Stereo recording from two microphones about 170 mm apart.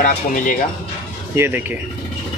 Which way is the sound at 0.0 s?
50° left (ahead or behind).